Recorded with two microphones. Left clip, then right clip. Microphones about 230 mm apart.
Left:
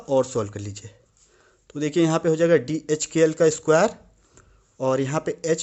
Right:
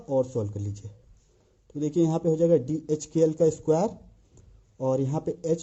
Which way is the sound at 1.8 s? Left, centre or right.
Centre.